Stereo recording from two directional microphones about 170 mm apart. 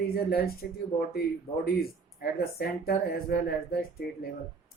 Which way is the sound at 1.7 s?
65° left (ahead or behind).